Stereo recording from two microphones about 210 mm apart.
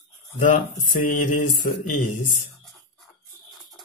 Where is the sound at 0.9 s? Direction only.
40° left (ahead or behind).